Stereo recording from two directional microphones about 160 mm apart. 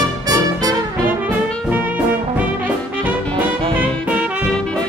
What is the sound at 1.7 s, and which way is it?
Music, 10° right (ahead or behind).